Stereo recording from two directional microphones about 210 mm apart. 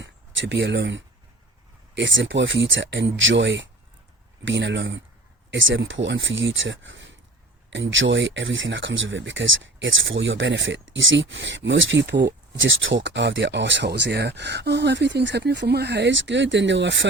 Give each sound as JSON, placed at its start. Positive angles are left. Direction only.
{"t": 0.0, "sound": "speech", "side_deg": -55}